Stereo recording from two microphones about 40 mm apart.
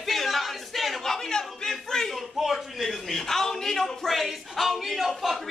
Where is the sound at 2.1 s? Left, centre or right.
Centre.